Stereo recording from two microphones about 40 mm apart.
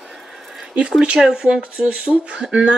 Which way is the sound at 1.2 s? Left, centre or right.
Centre.